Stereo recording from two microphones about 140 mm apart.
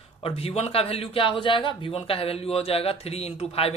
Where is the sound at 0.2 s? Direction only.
45° left (ahead or behind).